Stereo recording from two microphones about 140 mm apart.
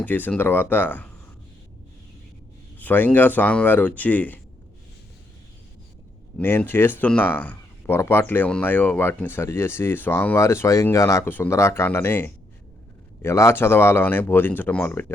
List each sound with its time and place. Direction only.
0.0 s speech: 10° left (ahead or behind)
2.7 s speech: 15° left (ahead or behind)
6.3 s speech: 10° left (ahead or behind)